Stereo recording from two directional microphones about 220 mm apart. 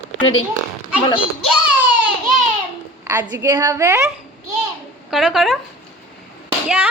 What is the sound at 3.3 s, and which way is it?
Speech, 20° right (ahead or behind).